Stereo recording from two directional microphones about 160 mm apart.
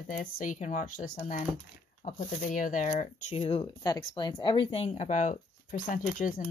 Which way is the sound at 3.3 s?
35° left (ahead or behind).